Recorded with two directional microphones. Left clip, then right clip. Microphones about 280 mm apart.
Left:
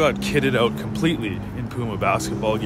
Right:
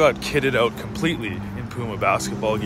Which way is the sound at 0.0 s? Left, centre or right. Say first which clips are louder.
Right 2 dB; centre.